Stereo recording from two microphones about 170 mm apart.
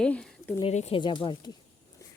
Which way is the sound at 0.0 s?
5° left (ahead or behind).